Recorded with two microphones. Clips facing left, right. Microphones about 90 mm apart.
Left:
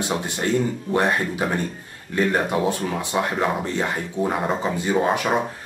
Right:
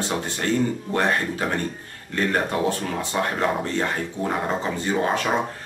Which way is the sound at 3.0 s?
15° left (ahead or behind).